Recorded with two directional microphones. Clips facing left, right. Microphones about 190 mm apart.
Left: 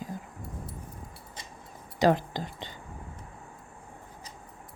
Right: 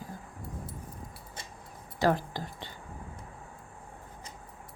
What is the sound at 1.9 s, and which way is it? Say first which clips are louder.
Speech: left 3 dB; 20° left (ahead or behind).